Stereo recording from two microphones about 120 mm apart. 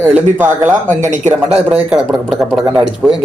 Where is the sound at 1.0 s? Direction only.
90° right.